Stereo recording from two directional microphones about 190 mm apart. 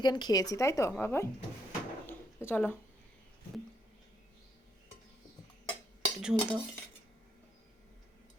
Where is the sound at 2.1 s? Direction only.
10° left (ahead or behind).